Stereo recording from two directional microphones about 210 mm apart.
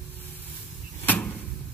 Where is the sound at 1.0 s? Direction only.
10° left (ahead or behind).